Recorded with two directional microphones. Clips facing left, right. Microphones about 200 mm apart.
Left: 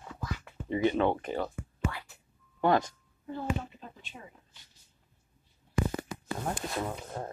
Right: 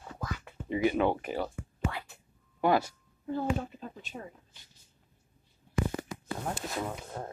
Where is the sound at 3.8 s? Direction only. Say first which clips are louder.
Right 6 dB; 45° right (ahead or behind).